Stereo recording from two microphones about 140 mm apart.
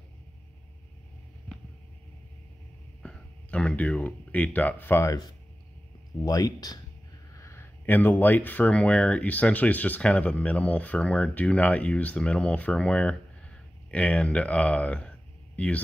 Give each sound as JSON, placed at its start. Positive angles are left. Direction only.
{"t": 3.0, "sound": "speech", "side_deg": 5}
{"t": 6.2, "sound": "speech", "side_deg": 25}